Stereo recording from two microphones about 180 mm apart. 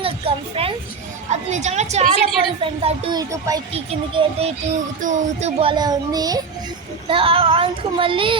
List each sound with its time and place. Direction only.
0.0 s speech: 30° right (ahead or behind)
3.2 s speech: 20° right (ahead or behind)
3.7 s speech: 30° right (ahead or behind)
4.9 s speech: 45° right (ahead or behind); by 8.4 s 30° right (ahead or behind)